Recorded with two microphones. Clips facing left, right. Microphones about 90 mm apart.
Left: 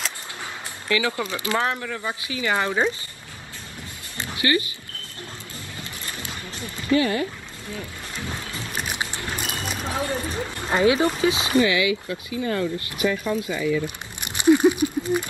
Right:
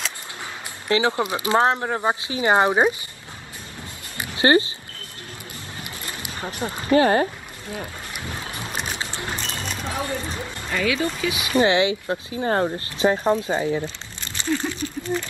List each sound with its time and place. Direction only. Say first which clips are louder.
0.8 s speech: right 4 dB; 25° right (ahead or behind)
4.4 s speech: right 6 dB; 30° right (ahead or behind)
5.8 s boat: right 1 dB; 20° right (ahead or behind)
6.6 s speech: right 4 dB; 35° right (ahead or behind)
9.1 s boat: right 1 dB; 20° right (ahead or behind)
9.4 s a sound: left 1 dB; 5° left (ahead or behind)
10.6 s speech: left 5 dB; 30° left (ahead or behind)
11.5 s speech: right 6 dB; 30° right (ahead or behind)
12.7 s speech: right 3 dB; 30° right (ahead or behind)
13.1 s speech: right 5 dB; 50° right (ahead or behind)
13.8 s a sound: left 1 dB; 15° left (ahead or behind)